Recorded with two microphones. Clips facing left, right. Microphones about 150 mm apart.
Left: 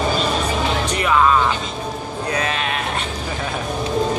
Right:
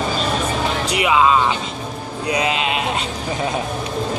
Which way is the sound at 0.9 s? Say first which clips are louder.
Right 2 dB; 10° right (ahead or behind).